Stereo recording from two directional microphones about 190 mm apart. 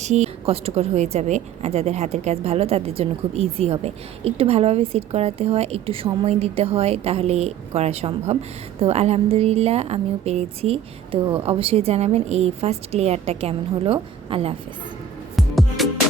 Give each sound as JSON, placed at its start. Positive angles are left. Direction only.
{"t": 0.0, "sound": "a woman's voice", "side_deg": -35}
{"t": 15.4, "sound": "music", "side_deg": 0}